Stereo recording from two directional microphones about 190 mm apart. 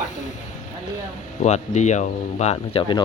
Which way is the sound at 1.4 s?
40° left (ahead or behind).